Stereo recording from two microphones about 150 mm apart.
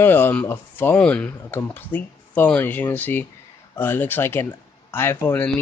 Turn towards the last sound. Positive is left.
turn(degrees=15)  # may be behind; listen again after turning